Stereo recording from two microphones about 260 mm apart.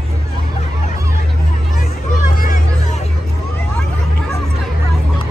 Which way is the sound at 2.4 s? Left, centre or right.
Left.